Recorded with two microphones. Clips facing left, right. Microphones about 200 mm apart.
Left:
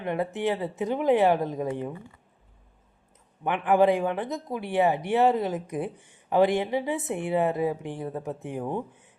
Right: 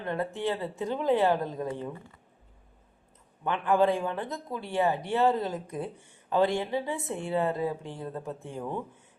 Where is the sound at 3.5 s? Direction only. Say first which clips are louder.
Left 3 dB; 15° left (ahead or behind).